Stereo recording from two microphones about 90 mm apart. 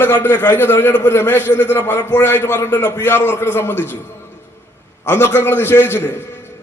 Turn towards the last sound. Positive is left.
turn(degrees=25)  # may be behind; listen again after turning